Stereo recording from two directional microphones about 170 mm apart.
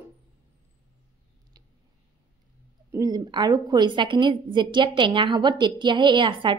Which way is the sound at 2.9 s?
20° right (ahead or behind).